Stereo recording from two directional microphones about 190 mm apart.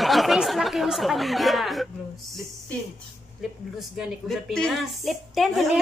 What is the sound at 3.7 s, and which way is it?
A woman's voice, centre (ahead or behind).